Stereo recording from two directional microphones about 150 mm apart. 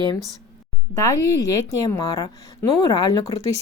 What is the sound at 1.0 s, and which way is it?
A woman's voice, 20° left (ahead or behind).